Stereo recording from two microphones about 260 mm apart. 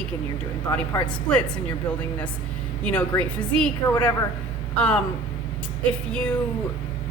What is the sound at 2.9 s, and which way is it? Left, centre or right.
A woman's voice, centre.